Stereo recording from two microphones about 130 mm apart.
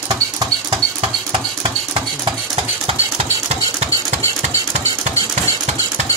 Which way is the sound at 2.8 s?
55° right (ahead or behind).